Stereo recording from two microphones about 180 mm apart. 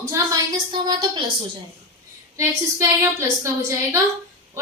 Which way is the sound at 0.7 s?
25° right (ahead or behind).